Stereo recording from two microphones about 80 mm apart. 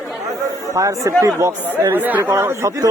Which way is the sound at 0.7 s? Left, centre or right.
Right.